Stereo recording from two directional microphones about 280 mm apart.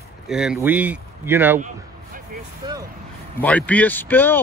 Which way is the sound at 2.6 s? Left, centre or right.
Centre.